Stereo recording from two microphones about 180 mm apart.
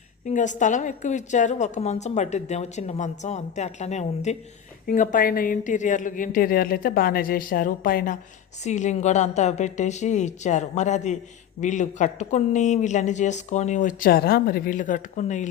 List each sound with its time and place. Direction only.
0.3 s a woman's voice: 45° left (ahead or behind)
4.9 s a woman's voice: 50° left (ahead or behind)